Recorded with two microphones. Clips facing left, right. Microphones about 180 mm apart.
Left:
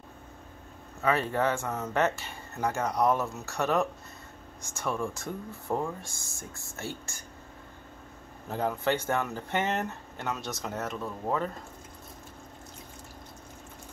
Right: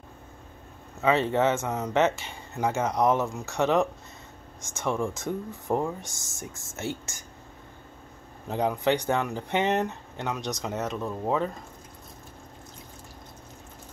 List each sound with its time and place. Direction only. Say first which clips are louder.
1.0 s speech: right 4 dB; 20° right (ahead or behind)
8.5 s speech: right 4 dB; 20° right (ahead or behind)